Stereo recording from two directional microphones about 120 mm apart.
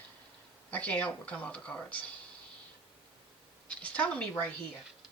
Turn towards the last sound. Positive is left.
turn(degrees=10)  # may be behind; listen again after turning